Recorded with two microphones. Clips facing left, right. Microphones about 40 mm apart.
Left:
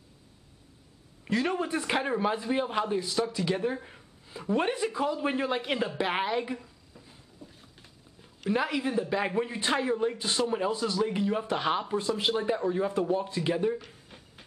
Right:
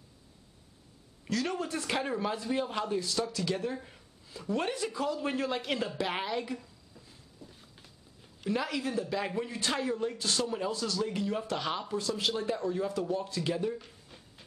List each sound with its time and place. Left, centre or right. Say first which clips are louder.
1.2 s a man's voice: left 4 dB; left